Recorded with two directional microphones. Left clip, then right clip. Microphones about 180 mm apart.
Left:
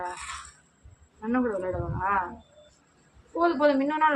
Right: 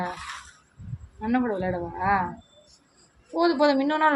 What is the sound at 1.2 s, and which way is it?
Speech, 35° right (ahead or behind).